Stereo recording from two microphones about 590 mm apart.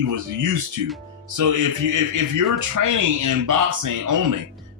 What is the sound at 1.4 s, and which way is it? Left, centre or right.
Speech, right.